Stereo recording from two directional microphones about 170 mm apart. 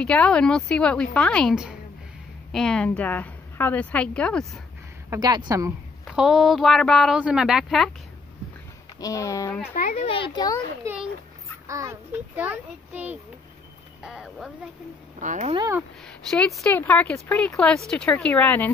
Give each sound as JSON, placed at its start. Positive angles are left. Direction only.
{"t": 0.0, "sound": "a woman's voice", "side_deg": 5}
{"t": 5.1, "sound": "a woman's voice", "side_deg": -25}
{"t": 6.0, "sound": "a woman's voice", "side_deg": 0}
{"t": 9.0, "sound": "speech", "side_deg": 20}
{"t": 9.8, "sound": "a child's voice", "side_deg": 50}
{"t": 10.0, "sound": "speech", "side_deg": 30}
{"t": 10.8, "sound": "a child's voice", "side_deg": -15}
{"t": 15.1, "sound": "speech", "side_deg": -45}
{"t": 16.1, "sound": "a woman's voice", "side_deg": 5}